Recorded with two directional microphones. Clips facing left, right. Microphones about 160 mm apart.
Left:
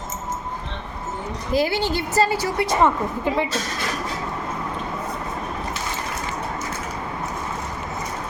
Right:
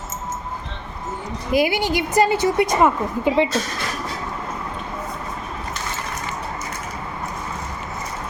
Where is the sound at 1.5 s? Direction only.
15° right (ahead or behind).